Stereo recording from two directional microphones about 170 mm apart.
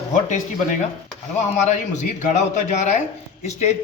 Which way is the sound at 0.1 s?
45° left (ahead or behind).